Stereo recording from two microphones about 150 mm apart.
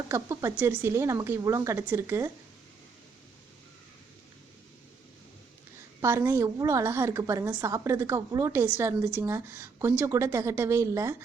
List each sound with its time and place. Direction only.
0.1 s a woman's voice: 20° right (ahead or behind)
6.0 s a woman's voice: 15° right (ahead or behind)